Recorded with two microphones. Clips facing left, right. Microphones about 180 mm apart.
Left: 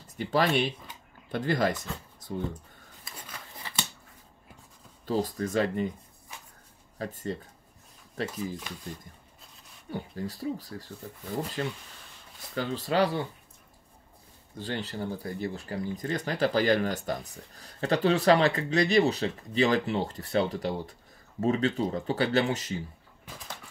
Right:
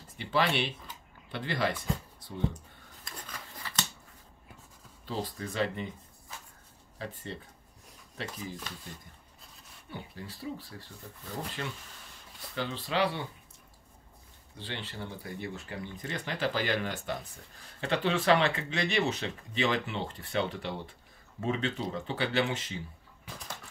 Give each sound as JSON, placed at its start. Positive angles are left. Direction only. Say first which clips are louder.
{"t": 0.0, "sound": "speech", "louder": "left 3 dB", "side_deg": 40}
{"t": 3.1, "sound": "a sound", "louder": "right 1 dB", "side_deg": 5}
{"t": 3.6, "sound": "a sound", "louder": "even", "side_deg": 20}
{"t": 5.0, "sound": "speech", "louder": "left 7 dB", "side_deg": 45}
{"t": 7.0, "sound": "speech", "louder": "left 6 dB", "side_deg": 45}
{"t": 9.8, "sound": "speech", "louder": "left 8 dB", "side_deg": 45}
{"t": 14.6, "sound": "speech", "louder": "left 7 dB", "side_deg": 40}